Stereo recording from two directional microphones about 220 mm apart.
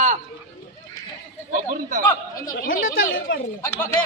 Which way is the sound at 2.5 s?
40° left (ahead or behind).